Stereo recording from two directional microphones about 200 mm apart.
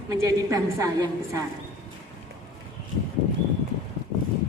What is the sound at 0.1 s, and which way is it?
A woman's voice, 15° right (ahead or behind).